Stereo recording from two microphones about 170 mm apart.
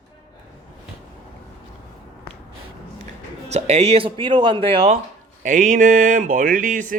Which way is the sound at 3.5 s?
40° right (ahead or behind).